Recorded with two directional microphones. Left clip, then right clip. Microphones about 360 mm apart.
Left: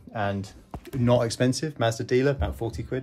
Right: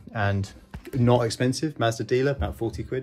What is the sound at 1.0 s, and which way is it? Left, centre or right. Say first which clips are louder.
Speech: even; centre.